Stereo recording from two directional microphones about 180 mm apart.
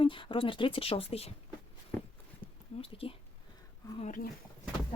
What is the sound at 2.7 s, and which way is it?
Speech, 30° left (ahead or behind).